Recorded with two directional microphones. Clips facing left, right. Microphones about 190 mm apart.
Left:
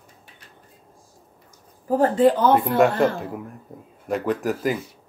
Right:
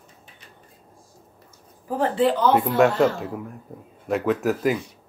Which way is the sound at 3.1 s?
Centre (ahead or behind).